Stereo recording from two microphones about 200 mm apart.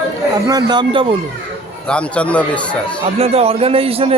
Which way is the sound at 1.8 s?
5° left (ahead or behind).